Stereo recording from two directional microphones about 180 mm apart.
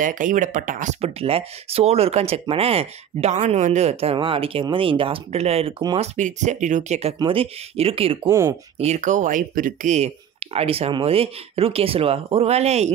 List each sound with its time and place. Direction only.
0.0 s speech: 45° right (ahead or behind); by 5.9 s 30° right (ahead or behind)
5.9 s speech: 40° right (ahead or behind)
8.3 s speech: 15° right (ahead or behind)
8.7 s speech: 40° right (ahead or behind)